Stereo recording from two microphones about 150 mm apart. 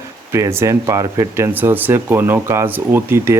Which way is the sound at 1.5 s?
10° right (ahead or behind).